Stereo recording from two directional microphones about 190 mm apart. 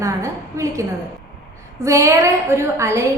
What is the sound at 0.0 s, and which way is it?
A woman's voice, 15° right (ahead or behind).